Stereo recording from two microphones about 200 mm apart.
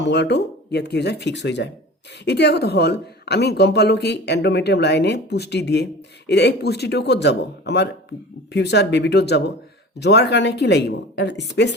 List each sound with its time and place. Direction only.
0.0 s speech: 55° left (ahead or behind)